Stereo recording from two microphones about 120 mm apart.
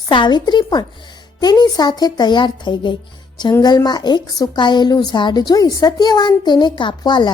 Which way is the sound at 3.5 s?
30° left (ahead or behind).